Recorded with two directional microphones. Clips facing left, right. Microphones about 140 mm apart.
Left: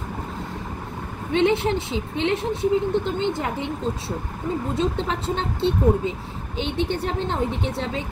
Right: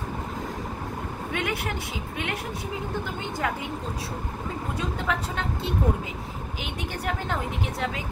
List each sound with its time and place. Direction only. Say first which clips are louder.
1.3 s speech: left 11 dB; 25° left (ahead or behind)
4.7 s speech: left 2 dB; 30° left (ahead or behind)